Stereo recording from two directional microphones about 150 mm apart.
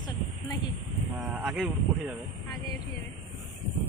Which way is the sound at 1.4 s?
Centre (ahead or behind).